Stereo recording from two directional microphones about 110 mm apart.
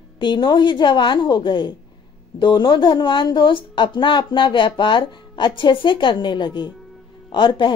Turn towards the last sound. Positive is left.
turn(degrees=45)  # may be behind; listen again after turning